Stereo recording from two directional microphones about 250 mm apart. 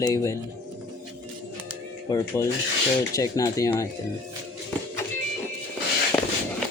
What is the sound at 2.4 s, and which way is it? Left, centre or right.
Speech, centre.